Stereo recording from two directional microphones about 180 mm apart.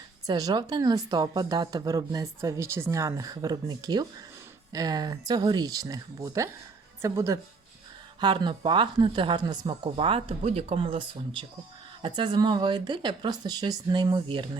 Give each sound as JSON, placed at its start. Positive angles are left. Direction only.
{"t": 0.3, "sound": "a woman's voice", "side_deg": -20}